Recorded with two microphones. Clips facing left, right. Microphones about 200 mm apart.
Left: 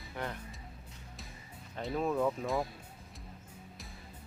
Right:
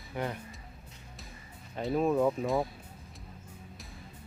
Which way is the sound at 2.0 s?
10° right (ahead or behind).